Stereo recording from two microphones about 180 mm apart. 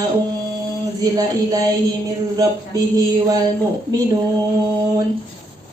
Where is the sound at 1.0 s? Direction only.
20° right (ahead or behind).